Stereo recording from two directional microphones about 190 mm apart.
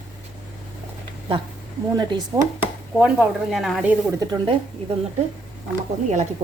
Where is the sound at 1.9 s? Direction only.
20° right (ahead or behind).